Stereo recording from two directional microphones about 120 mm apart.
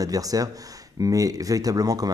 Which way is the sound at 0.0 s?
30° right (ahead or behind).